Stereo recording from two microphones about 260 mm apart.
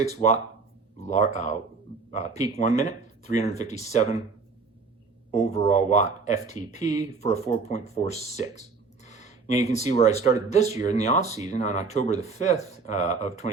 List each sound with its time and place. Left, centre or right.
0.0 s speech: left
5.3 s speech: left